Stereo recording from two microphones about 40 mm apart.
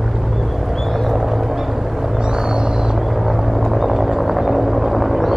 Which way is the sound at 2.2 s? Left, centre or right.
Right.